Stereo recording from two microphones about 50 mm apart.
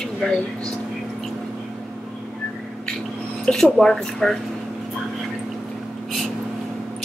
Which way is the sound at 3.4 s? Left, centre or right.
Centre.